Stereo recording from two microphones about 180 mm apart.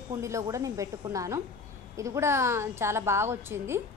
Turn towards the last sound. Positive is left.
turn(degrees=-15)  # may be behind; listen again after turning